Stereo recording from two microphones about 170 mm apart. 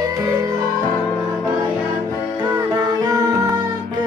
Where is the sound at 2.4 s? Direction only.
25° right (ahead or behind).